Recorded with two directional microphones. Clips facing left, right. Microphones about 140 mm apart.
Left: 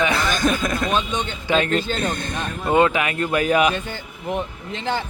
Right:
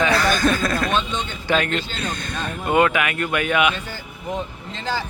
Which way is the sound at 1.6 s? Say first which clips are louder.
Left 4 dB; 45° left (ahead or behind).